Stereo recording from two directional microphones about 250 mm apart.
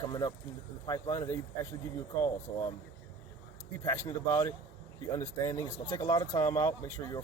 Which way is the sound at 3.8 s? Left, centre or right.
Centre.